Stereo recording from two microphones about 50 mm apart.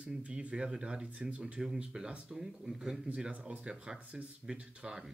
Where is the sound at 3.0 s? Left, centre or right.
Right.